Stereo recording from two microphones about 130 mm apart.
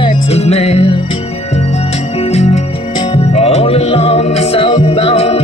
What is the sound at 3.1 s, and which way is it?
Music, 50° left (ahead or behind).